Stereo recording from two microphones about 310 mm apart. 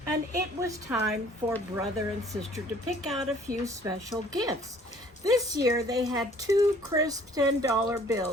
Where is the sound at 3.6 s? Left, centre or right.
Centre.